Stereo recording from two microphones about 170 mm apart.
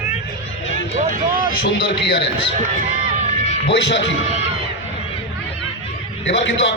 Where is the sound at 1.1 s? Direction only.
55° right (ahead or behind).